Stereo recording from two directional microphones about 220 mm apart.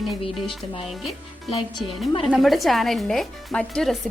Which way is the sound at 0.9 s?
Centre (ahead or behind).